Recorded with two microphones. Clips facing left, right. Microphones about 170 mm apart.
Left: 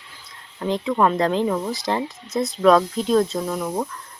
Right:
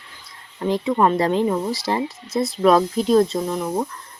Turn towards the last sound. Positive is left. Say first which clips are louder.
# right 2 dB
turn(degrees=0)  # may be behind; listen again after turning